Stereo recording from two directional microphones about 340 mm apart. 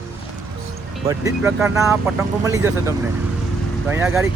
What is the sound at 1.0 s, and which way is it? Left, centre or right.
Speech, centre.